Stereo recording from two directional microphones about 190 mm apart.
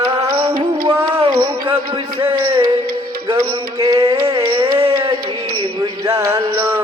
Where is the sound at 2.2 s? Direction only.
25° right (ahead or behind).